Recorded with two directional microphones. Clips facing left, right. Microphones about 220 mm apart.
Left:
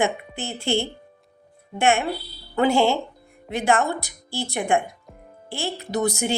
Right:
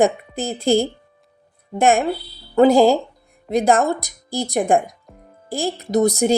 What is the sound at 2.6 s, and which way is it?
A woman's voice, 35° right (ahead or behind).